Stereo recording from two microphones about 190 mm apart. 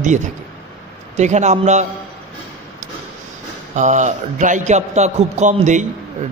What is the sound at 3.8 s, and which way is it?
A man's voice, 40° right (ahead or behind).